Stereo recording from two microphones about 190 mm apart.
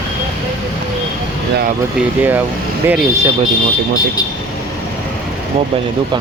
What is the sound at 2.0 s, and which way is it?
Speech, 10° right (ahead or behind).